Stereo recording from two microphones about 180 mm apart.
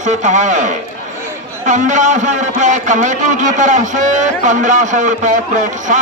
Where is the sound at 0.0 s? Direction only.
40° right (ahead or behind).